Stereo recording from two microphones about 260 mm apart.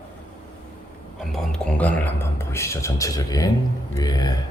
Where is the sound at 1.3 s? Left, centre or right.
Centre.